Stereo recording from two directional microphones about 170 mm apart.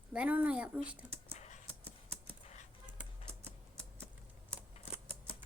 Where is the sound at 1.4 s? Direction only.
45° left (ahead or behind).